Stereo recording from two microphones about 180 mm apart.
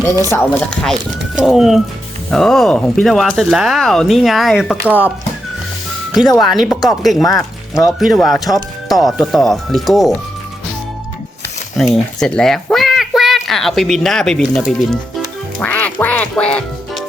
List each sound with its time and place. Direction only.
0.3 s speech: 15° left (ahead or behind)
1.4 s speech: centre (ahead or behind)
6.1 s speech: centre (ahead or behind)
11.8 s speech: 5° left (ahead or behind)
15.5 s music: 10° left (ahead or behind)